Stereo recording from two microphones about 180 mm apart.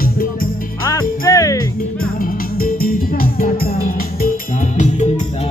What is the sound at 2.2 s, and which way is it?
Music, 50° left (ahead or behind).